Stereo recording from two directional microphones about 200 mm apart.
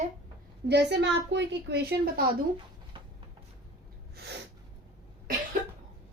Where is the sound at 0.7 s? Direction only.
55° right (ahead or behind).